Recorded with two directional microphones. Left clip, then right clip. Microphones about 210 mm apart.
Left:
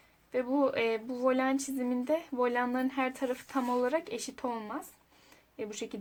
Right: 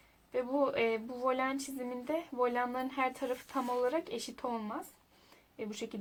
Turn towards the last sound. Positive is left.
turn(degrees=35)  # may be behind; listen again after turning